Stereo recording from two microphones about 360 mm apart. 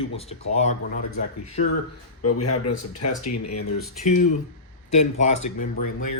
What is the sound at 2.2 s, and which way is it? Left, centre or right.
A man's voice, left.